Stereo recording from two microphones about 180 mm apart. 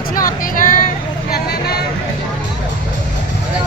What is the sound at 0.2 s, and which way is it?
Vehicle, 50° left (ahead or behind).